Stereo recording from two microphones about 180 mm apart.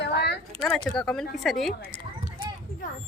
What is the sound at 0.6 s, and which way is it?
Speech, centre (ahead or behind).